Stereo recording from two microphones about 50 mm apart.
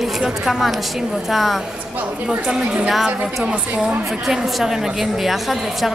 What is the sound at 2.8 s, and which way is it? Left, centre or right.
A woman's voice, centre.